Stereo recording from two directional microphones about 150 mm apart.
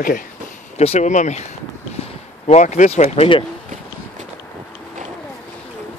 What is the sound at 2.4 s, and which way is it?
Speech, 50° left (ahead or behind).